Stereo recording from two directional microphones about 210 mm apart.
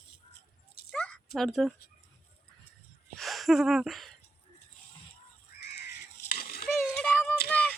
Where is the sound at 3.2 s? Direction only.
Centre (ahead or behind).